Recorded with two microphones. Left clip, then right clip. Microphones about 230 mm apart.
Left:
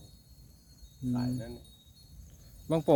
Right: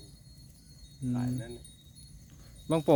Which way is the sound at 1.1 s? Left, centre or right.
Left.